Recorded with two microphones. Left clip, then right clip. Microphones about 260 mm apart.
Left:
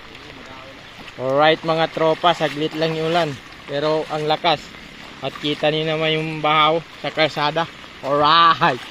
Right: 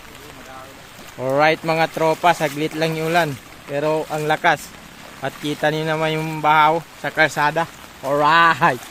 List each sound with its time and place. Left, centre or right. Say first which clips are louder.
1.2 s speech: left 1 dB; right
5.6 s speech: even; right
6.1 s speech: right 4 dB; centre